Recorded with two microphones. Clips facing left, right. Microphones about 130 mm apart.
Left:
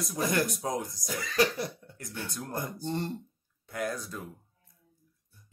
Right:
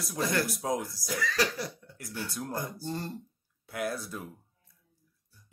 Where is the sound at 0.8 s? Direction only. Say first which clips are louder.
Right 3 dB; 20° left (ahead or behind).